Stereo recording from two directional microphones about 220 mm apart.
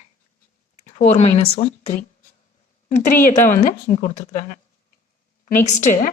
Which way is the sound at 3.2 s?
35° left (ahead or behind).